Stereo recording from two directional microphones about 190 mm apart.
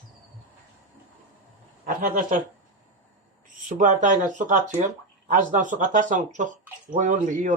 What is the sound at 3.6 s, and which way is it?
Speech, 40° right (ahead or behind).